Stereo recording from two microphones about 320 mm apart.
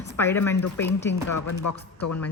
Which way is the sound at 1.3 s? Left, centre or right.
Left.